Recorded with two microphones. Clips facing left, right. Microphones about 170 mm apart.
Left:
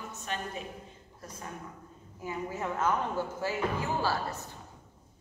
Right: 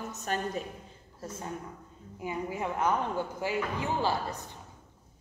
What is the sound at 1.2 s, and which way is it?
Speech, 25° right (ahead or behind).